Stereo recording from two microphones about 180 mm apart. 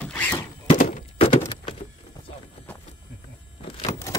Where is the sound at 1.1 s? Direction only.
35° left (ahead or behind).